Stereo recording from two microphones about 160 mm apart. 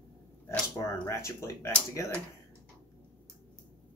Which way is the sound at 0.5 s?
15° left (ahead or behind).